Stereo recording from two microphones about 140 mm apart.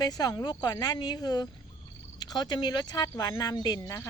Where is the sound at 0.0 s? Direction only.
25° left (ahead or behind).